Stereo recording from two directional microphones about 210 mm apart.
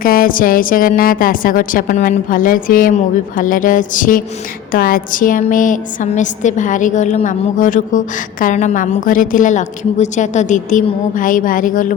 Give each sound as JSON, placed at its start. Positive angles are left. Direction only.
{"t": 0.0, "sound": "a woman's voice", "side_deg": 45}